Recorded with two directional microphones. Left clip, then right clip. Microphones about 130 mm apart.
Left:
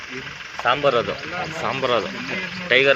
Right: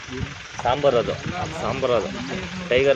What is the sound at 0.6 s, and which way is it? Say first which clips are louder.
Speech: left 1 dB; 15° right (ahead or behind).